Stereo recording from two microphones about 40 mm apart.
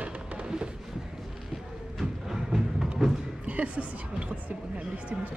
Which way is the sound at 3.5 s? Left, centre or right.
Right.